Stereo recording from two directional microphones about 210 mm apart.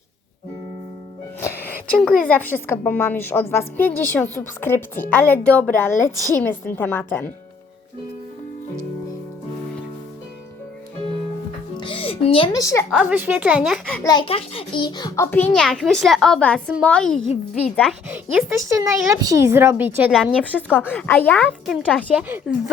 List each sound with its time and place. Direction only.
1.4 s music: 10° left (ahead or behind)
2.0 s a woman's voice: 5° left (ahead or behind)
11.8 s music: 25° left (ahead or behind)
12.5 s a woman's voice: 15° left (ahead or behind)
12.9 s speech: 5° right (ahead or behind)
14.0 s a woman's voice: 20° left (ahead or behind); by 20.4 s 5° right (ahead or behind)
20.7 s a woman's voice: 10° left (ahead or behind)
22.0 s speech: 5° right (ahead or behind)